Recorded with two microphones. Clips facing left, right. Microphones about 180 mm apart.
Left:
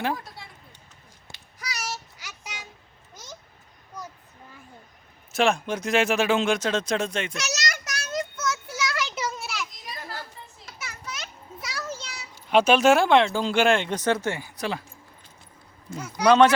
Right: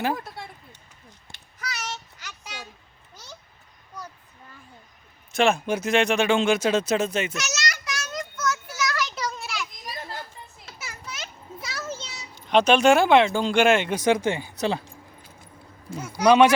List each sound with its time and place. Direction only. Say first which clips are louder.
0.4 s a sound: right 6 dB; 55° right (ahead or behind)
1.5 s child singing: even; 10° left (ahead or behind)
5.3 s speech: right 2 dB; centre (ahead or behind)
7.3 s a child's voice: even; 35° left (ahead or behind)
7.7 s a sound: right 1 dB; 50° left (ahead or behind)
8.2 s child singing: right 3 dB; 30° left (ahead or behind)
9.1 s children playing: even; 5° left (ahead or behind)
10.1 s children playing: right 1 dB; 20° right (ahead or behind)
11.9 s a sound: right 1 dB; 25° right (ahead or behind)
12.5 s speech: right 1 dB; 5° left (ahead or behind); by 14.8 s 25° right (ahead or behind)
16.2 s speech: right 1 dB; 10° right (ahead or behind)